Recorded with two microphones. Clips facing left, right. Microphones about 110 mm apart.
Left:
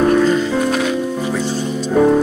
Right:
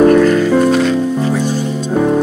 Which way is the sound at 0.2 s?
20° left (ahead or behind).